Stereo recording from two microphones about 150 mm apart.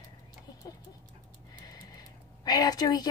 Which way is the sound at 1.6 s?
25° left (ahead or behind).